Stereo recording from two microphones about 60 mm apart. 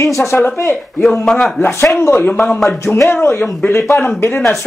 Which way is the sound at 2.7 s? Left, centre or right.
Left.